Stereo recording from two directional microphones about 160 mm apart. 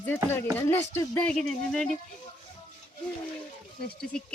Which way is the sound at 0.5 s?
20° left (ahead or behind).